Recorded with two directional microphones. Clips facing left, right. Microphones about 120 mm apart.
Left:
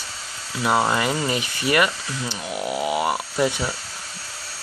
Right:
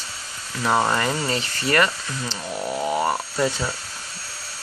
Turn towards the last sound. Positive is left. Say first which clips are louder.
# left 1 dB
turn(degrees=15)  # may be behind; listen again after turning